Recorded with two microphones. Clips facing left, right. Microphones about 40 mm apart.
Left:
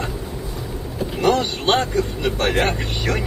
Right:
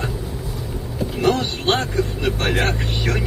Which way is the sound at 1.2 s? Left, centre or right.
Centre.